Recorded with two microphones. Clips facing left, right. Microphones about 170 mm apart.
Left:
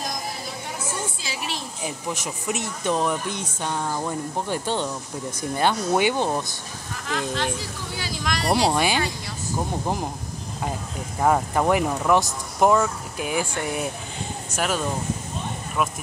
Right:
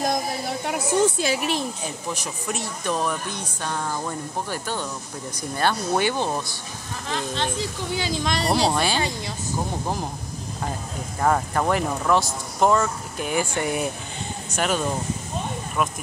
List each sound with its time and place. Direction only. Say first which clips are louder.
0.7 s a sound: right 12 dB; 65° right (ahead or behind)
2.1 s speech: left 1 dB; 20° left (ahead or behind)
4.5 s speech: left 4 dB; 25° left (ahead or behind)
7.1 s speech: left 1 dB; 25° right (ahead or behind)
8.6 s speech: left 1 dB; 15° left (ahead or behind)
11.1 s speech: left 1 dB; 10° left (ahead or behind)